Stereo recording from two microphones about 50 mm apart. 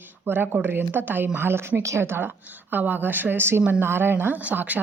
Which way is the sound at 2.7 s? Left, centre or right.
Right.